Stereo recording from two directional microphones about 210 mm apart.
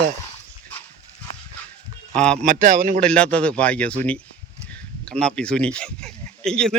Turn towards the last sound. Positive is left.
turn(degrees=5)  # may be behind; listen again after turning